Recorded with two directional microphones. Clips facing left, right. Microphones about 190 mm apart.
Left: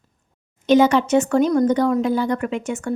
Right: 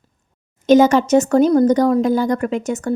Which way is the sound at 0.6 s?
45° right (ahead or behind).